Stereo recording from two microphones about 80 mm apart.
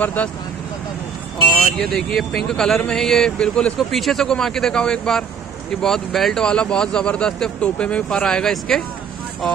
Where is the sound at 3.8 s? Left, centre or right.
Centre.